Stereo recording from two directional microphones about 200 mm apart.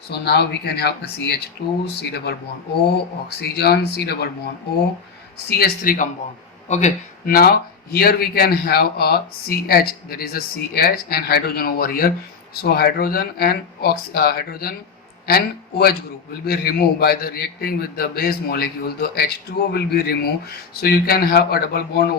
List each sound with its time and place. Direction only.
0.1 s speech: 55° left (ahead or behind)
5.5 s speech: 50° left (ahead or behind)